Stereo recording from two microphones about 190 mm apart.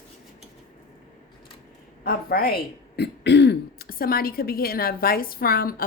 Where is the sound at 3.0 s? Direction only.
65° left (ahead or behind).